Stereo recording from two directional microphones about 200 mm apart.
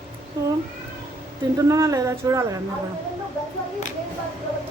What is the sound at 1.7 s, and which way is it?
Speech, 15° right (ahead or behind).